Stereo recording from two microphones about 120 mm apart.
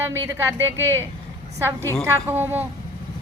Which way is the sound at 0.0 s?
20° right (ahead or behind).